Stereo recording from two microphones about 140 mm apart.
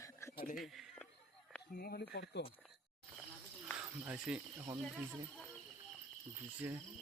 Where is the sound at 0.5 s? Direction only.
Centre (ahead or behind).